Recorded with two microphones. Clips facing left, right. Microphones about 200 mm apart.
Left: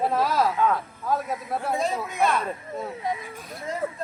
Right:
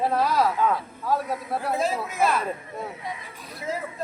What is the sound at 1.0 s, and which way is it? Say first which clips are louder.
Speech: right 1 dB; 5° right (ahead or behind).